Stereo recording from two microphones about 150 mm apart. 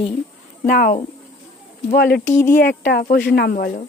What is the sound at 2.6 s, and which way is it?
Speech, 90° left.